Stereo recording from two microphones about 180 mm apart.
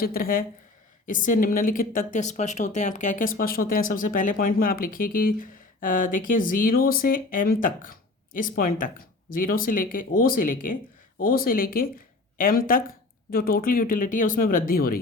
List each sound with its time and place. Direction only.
0.0 s speech: 55° left (ahead or behind)